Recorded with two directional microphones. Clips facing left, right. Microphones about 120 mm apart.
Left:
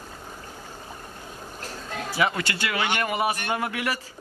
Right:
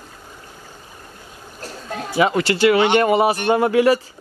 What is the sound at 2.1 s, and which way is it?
Speech, 25° right (ahead or behind).